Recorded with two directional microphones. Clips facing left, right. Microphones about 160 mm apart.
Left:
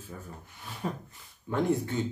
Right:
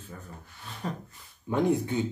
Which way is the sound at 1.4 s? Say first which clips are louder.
Right 2 dB; 15° right (ahead or behind).